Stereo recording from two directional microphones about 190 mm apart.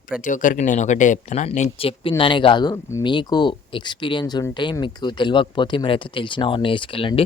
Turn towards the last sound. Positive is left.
turn(degrees=30)  # may be behind; listen again after turning